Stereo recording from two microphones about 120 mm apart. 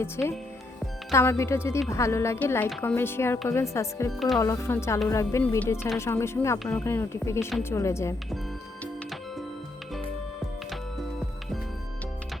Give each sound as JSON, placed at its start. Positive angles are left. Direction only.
{"t": 0.0, "sound": "a woman's voice", "side_deg": 20}